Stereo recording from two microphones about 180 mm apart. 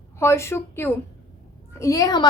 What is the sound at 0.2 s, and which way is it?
A woman's voice, 15° left (ahead or behind).